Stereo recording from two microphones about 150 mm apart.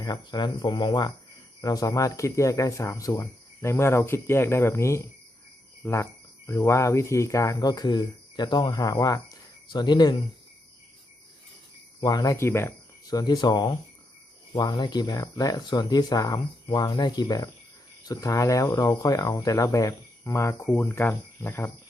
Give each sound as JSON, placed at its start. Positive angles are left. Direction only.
{"t": 0.0, "sound": "speech", "side_deg": 30}
{"t": 11.9, "sound": "speech", "side_deg": 25}